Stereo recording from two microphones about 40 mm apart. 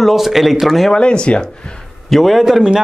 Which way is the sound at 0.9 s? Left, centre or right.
Left.